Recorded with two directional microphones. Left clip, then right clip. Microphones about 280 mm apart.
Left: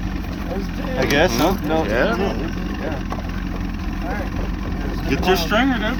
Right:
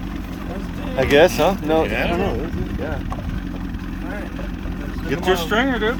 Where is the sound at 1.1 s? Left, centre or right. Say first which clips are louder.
Right 4 dB; right.